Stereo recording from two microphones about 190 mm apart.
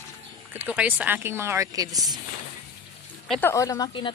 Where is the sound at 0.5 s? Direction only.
10° right (ahead or behind).